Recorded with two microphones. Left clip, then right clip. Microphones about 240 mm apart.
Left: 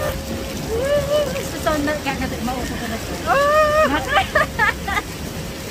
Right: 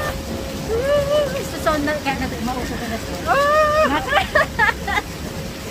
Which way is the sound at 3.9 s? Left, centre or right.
Centre.